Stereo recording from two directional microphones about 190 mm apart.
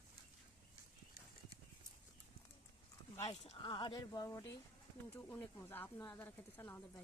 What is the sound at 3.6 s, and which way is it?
Speech, 25° left (ahead or behind).